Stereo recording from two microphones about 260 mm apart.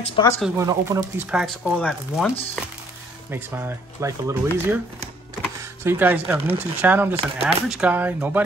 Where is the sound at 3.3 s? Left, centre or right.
Centre.